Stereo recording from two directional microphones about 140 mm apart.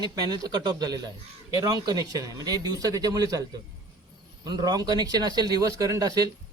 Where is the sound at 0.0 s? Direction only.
30° right (ahead or behind).